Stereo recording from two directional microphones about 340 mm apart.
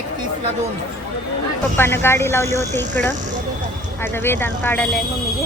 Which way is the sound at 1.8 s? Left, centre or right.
Centre.